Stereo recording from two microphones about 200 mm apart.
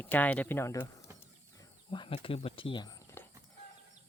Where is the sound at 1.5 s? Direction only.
25° left (ahead or behind).